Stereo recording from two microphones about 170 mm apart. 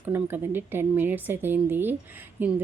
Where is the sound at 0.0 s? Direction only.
10° right (ahead or behind).